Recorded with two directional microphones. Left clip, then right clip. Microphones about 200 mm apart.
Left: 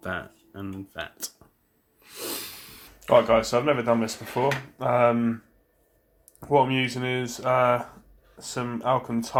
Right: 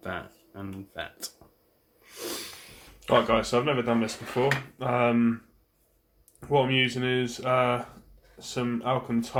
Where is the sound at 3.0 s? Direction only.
20° left (ahead or behind).